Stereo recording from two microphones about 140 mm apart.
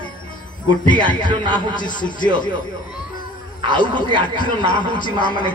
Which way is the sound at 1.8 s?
35° left (ahead or behind).